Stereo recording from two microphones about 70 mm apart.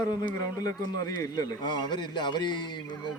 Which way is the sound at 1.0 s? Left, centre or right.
Left.